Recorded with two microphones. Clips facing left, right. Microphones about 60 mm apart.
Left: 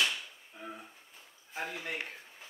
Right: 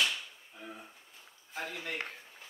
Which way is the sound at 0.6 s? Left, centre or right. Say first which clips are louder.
Left 2 dB; centre.